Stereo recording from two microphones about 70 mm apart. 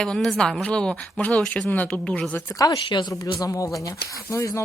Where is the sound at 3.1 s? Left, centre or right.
Left.